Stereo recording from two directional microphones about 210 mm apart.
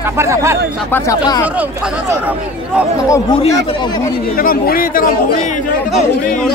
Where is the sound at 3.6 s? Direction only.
20° left (ahead or behind).